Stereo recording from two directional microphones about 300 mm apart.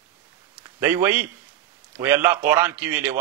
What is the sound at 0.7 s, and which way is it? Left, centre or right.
A man's voice, centre.